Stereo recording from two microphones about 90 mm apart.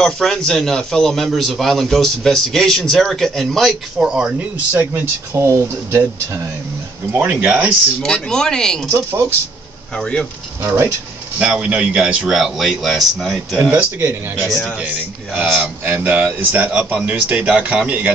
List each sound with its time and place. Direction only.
0.0 s a man's voice: 5° left (ahead or behind)
4.1 s speech: 10° right (ahead or behind)
4.7 s speech: 25° right (ahead or behind)
8.0 s speech: 5° left (ahead or behind)
9.9 s speech: 10° left (ahead or behind)
10.6 s speech: 30° right (ahead or behind)
11.5 s a man's voice: 15° right (ahead or behind)
13.7 s speech: 25° right (ahead or behind)